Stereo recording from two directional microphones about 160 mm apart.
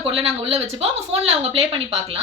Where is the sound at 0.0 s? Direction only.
35° right (ahead or behind).